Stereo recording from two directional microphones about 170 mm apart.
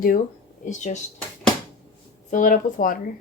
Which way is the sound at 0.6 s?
45° left (ahead or behind).